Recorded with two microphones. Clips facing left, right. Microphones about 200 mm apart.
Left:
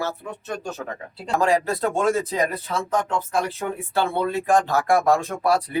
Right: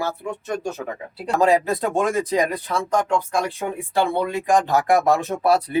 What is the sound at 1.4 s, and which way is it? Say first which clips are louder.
Speech: right 3 dB; 20° right (ahead or behind).